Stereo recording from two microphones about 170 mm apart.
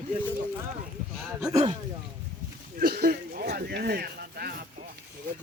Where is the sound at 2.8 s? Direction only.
70° right (ahead or behind).